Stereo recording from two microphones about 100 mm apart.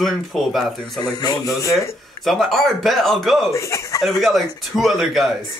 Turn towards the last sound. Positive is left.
turn(degrees=0)  # may be behind; listen again after turning